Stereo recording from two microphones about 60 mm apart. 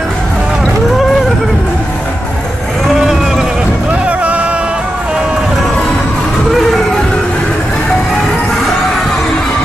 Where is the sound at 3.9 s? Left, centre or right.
Right.